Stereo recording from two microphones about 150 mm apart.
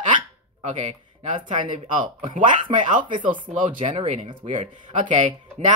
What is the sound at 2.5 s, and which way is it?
Speech, 55° right (ahead or behind).